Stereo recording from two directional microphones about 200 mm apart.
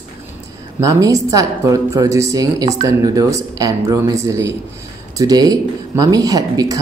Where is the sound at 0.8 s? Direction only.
15° right (ahead or behind).